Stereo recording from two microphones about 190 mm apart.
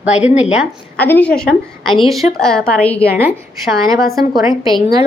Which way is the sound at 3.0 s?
10° right (ahead or behind).